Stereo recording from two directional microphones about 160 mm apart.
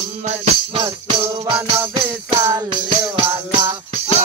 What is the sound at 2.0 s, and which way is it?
Jingle bell, 15° right (ahead or behind).